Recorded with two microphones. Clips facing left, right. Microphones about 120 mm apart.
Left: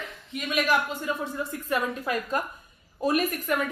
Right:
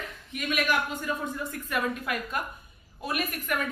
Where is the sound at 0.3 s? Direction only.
25° left (ahead or behind).